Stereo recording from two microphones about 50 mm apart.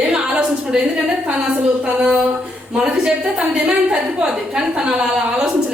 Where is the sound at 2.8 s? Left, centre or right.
Centre.